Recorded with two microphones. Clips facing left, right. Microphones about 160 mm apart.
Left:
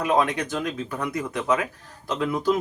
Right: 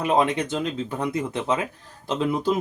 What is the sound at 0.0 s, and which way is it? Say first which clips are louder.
Speech: right 1 dB; 25° right (ahead or behind).